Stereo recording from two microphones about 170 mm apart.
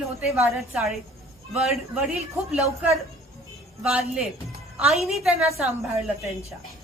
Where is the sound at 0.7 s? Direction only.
5° right (ahead or behind).